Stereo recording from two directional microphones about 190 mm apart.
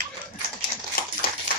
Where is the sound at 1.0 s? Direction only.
50° left (ahead or behind).